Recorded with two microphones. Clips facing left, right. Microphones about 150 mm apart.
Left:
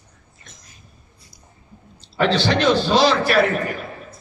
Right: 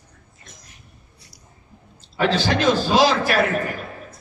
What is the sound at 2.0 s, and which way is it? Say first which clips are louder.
A man's voice: left 2 dB; 45° right (ahead or behind).